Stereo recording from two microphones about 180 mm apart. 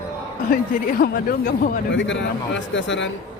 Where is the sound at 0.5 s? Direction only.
55° left (ahead or behind).